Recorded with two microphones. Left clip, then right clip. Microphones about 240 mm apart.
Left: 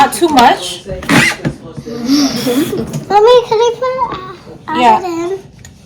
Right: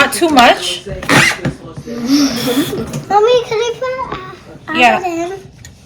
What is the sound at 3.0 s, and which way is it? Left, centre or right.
A child's voice, centre.